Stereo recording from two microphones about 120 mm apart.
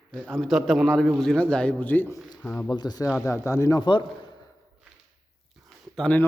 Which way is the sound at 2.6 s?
35° left (ahead or behind).